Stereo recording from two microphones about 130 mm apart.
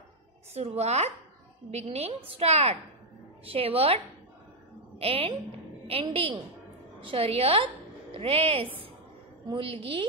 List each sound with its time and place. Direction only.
0.6 s a woman's voice: 55° right (ahead or behind)